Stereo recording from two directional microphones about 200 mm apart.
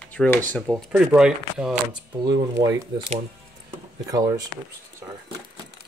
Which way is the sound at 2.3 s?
20° right (ahead or behind).